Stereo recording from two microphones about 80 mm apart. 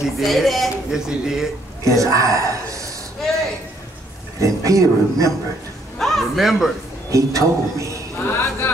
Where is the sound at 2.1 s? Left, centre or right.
Right.